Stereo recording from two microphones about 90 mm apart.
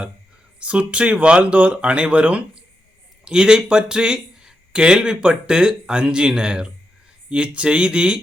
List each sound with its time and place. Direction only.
0.6 s speech: 10° right (ahead or behind)